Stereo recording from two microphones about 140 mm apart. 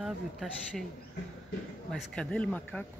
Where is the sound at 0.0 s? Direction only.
Centre (ahead or behind).